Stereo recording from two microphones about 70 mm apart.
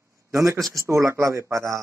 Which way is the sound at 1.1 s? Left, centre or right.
Right.